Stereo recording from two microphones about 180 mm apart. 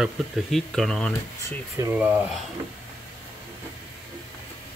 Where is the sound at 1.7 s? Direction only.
10° right (ahead or behind).